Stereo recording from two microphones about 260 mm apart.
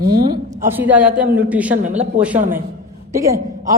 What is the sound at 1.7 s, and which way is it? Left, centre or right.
Speech, right.